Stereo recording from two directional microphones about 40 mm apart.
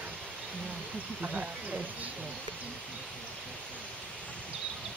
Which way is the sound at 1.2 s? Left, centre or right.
Right.